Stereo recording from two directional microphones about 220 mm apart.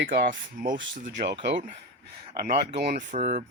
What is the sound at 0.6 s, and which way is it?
Speech, 35° right (ahead or behind).